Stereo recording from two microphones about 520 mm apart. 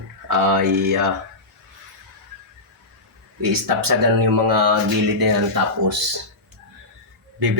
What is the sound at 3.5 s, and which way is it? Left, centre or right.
Speech, right.